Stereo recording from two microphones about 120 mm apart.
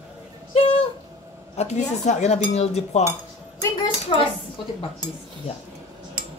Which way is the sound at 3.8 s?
45° left (ahead or behind).